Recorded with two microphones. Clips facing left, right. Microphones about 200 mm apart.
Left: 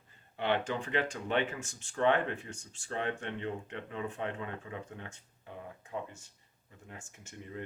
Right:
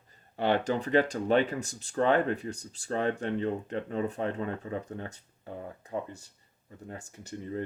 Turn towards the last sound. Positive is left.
turn(degrees=-35)  # may be behind; listen again after turning